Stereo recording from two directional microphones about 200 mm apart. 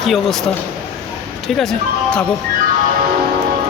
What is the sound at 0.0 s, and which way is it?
Speech, centre (ahead or behind).